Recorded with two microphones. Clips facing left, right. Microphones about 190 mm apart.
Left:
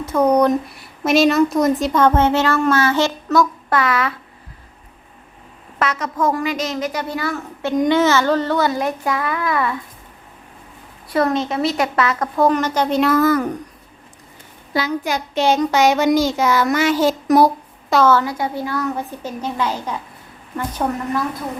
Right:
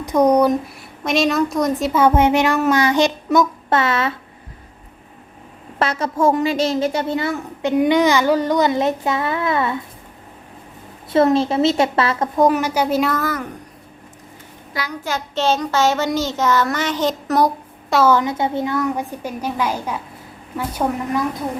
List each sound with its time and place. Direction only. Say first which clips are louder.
0.0 s a woman's voice: right 1 dB; 15° right (ahead or behind)
0.5 s a woman's voice: left 1 dB; centre (ahead or behind); by 4.1 s 25° right (ahead or behind)
5.8 s a woman's voice: right 2 dB; 30° right (ahead or behind)
11.1 s a woman's voice: right 4 dB; 25° right (ahead or behind)
12.4 s a woman's voice: even; 10° right (ahead or behind)
14.7 s a child's voice: left 7 dB; 25° left (ahead or behind)
15.0 s child singing: right 2 dB; 15° left (ahead or behind)
18.1 s a woman's voice: right 1 dB; 20° right (ahead or behind)